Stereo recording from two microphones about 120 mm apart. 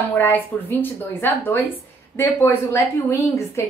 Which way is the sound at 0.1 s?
15° left (ahead or behind).